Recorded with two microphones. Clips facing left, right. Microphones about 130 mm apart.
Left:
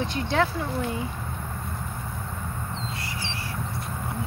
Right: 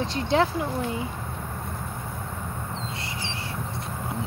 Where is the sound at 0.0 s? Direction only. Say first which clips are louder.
Right 2 dB; 25° right (ahead or behind).